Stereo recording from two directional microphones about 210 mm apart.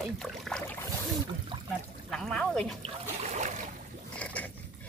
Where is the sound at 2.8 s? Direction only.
35° right (ahead or behind).